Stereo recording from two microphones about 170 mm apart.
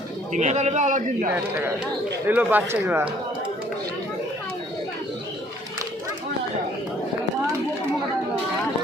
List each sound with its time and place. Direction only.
0.3 s a man's voice: 40° right (ahead or behind)
1.3 s speech: 15° right (ahead or behind)